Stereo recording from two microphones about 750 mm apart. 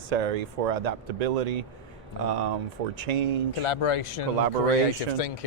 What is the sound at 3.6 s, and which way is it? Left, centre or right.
Speech, left.